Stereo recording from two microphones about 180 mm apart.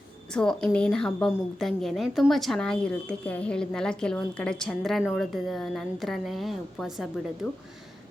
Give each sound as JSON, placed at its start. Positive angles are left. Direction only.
{"t": 0.3, "sound": "a woman's voice", "side_deg": 5}